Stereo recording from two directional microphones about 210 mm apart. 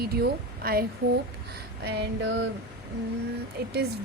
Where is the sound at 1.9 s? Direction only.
55° right (ahead or behind).